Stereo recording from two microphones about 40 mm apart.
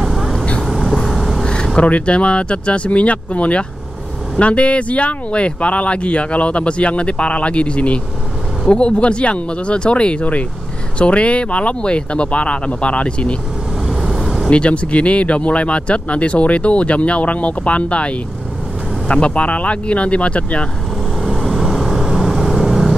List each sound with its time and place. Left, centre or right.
0.0 s vehicle: centre
1.4 s vehicle: centre
1.8 s speech: left
13.8 s vehicle: centre
14.5 s speech: left
21.2 s vehicle: centre